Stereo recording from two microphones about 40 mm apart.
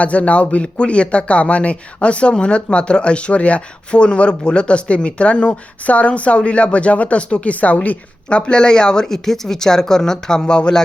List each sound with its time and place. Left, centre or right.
0.0 s speech: left